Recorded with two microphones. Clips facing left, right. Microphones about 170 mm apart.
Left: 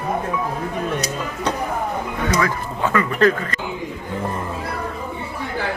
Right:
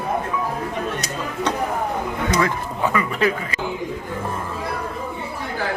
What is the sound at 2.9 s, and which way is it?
Speech, 10° right (ahead or behind).